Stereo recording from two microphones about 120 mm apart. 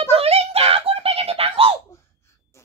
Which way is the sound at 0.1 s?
55° right (ahead or behind).